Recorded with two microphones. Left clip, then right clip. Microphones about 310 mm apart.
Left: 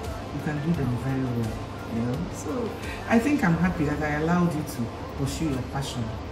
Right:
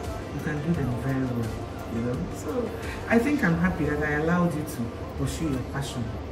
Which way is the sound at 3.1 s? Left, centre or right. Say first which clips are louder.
Even; centre.